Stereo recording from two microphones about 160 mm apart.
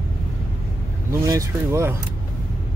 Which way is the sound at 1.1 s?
20° right (ahead or behind).